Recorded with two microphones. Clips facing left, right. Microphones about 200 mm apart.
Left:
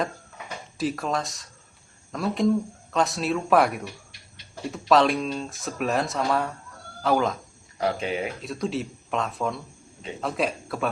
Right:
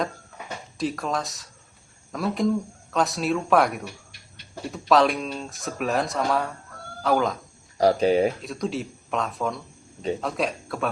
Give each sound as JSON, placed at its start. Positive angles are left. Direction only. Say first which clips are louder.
{"t": 0.8, "sound": "speech", "louder": "even", "side_deg": 0}
{"t": 7.8, "sound": "speech", "louder": "right 8 dB", "side_deg": -35}
{"t": 8.4, "sound": "speech", "louder": "even", "side_deg": 0}